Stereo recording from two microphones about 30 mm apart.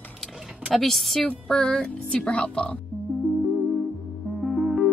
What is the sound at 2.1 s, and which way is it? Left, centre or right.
Speech, left.